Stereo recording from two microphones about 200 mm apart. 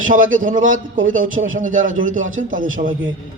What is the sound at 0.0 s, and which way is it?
A man's voice, 40° right (ahead or behind).